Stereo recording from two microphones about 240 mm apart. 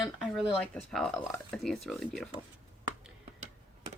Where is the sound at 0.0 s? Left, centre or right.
Centre.